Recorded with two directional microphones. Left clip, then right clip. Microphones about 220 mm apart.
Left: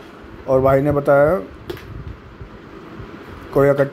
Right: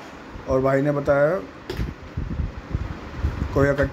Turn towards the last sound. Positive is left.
turn(degrees=20)  # may be behind; listen again after turning